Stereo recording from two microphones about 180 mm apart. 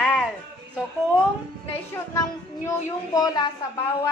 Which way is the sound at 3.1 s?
20° left (ahead or behind).